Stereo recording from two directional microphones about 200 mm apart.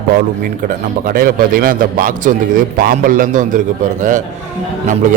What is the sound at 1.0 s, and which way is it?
A man's voice, 45° right (ahead or behind).